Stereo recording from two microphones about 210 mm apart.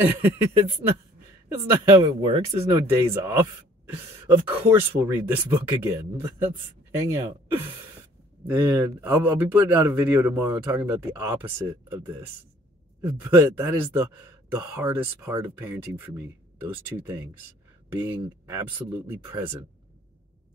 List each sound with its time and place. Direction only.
0.0 s speech: 10° right (ahead or behind)
1.5 s speech: 15° right (ahead or behind)
2.5 s speech: 10° right (ahead or behind)